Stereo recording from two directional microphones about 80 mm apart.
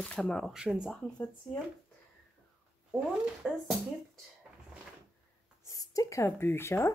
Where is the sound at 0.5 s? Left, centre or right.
Centre.